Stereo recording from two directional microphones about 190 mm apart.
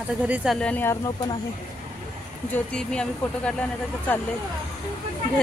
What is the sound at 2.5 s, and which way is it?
Speech, 5° left (ahead or behind).